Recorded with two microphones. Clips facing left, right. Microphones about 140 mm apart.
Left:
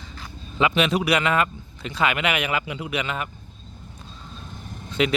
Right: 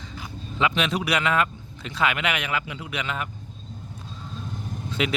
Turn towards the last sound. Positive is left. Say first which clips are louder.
# left 4 dB
turn(degrees=0)  # may be behind; listen again after turning